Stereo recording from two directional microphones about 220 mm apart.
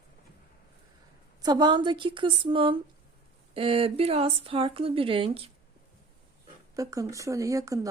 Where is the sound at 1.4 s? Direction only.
20° right (ahead or behind).